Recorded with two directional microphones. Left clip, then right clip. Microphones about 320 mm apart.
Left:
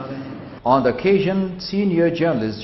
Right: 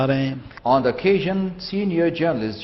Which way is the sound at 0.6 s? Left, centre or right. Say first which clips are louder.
Left 1 dB; right.